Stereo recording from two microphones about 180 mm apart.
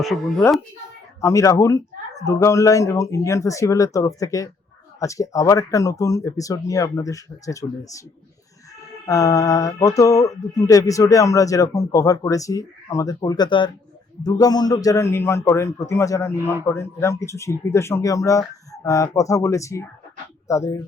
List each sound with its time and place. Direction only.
0.0 s speech: centre (ahead or behind)
1.2 s speech: 15° left (ahead or behind)
9.0 s speech: 20° left (ahead or behind)